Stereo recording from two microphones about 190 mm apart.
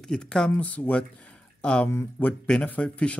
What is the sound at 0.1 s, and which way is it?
Speech, 5° left (ahead or behind).